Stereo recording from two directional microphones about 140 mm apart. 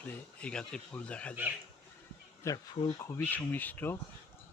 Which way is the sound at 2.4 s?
20° left (ahead or behind).